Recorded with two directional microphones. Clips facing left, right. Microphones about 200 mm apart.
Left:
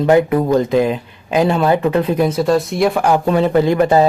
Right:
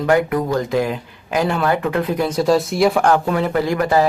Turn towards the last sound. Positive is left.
turn(degrees=25)  # may be behind; listen again after turning